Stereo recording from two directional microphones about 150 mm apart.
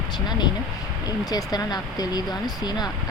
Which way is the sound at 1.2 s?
25° left (ahead or behind).